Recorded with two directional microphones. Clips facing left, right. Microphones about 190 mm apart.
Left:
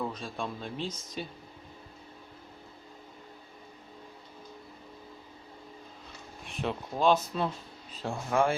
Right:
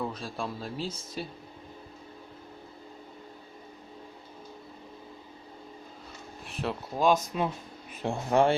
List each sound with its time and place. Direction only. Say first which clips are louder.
0.0 s speech: right 1 dB; 5° right (ahead or behind)
6.4 s speech: even; centre (ahead or behind)
8.0 s speech: right 4 dB; 30° right (ahead or behind)